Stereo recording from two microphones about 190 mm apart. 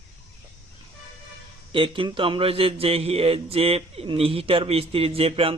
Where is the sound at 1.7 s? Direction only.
25° right (ahead or behind).